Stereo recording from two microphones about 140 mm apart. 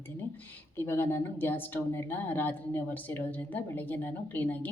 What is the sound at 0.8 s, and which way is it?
Speech, 15° left (ahead or behind).